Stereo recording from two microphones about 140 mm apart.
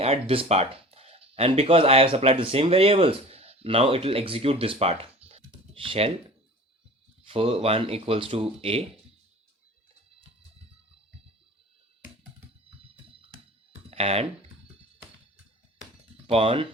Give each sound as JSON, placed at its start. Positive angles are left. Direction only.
{"t": 0.0, "sound": "speech", "side_deg": -45}
{"t": 5.5, "sound": "computer keyboard", "side_deg": -40}
{"t": 7.3, "sound": "speech", "side_deg": -45}
{"t": 13.9, "sound": "speech", "side_deg": -45}
{"t": 16.2, "sound": "speech", "side_deg": -45}